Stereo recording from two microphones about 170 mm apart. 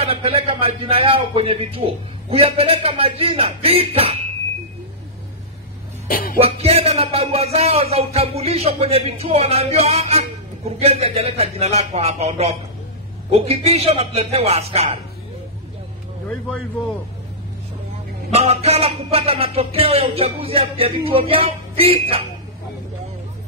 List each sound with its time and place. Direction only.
0.0 s speech: 35° right (ahead or behind)
6.0 s music: 55° left (ahead or behind)
6.4 s speech: 35° right (ahead or behind)
18.3 s speech: 35° right (ahead or behind)